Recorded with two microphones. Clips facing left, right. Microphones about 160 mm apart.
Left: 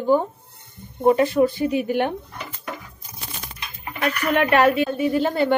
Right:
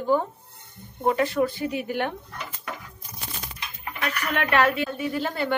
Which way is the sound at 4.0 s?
20° left (ahead or behind).